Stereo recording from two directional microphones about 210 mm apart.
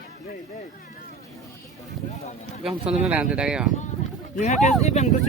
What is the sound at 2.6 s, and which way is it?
Speech, 5° right (ahead or behind).